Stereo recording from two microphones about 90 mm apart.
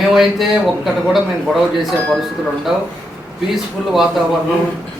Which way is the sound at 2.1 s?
Centre (ahead or behind).